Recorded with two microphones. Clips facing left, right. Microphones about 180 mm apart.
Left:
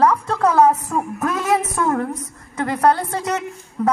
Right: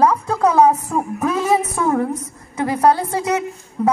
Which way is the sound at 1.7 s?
20° right (ahead or behind).